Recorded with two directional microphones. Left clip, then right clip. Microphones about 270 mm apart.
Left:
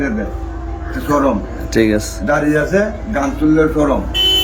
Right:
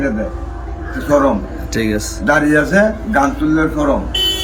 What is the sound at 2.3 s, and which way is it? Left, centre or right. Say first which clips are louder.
Speech: right 2 dB; right.